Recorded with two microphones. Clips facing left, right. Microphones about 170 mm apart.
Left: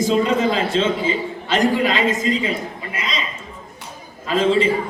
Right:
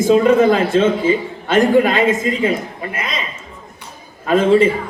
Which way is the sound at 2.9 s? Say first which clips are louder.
Right 2 dB; 55° right (ahead or behind).